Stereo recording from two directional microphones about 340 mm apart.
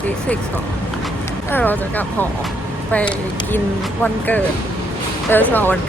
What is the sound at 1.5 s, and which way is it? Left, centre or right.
Speech, centre.